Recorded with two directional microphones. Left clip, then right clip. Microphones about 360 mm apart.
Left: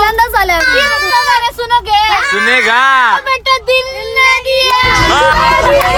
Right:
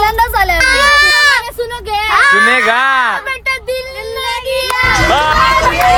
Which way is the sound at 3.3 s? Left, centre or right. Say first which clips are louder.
Left 6 dB; centre.